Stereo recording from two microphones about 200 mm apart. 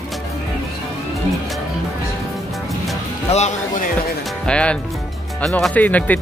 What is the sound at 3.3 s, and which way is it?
Speech, 35° left (ahead or behind).